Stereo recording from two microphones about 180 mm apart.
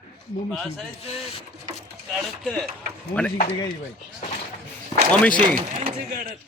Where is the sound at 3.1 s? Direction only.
10° left (ahead or behind).